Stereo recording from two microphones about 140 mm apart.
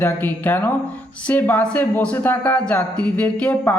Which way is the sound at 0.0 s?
10° left (ahead or behind).